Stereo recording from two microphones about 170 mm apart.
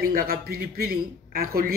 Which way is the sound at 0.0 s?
60° right (ahead or behind).